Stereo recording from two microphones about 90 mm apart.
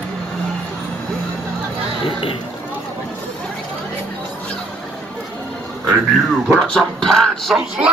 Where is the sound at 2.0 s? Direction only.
75° left (ahead or behind).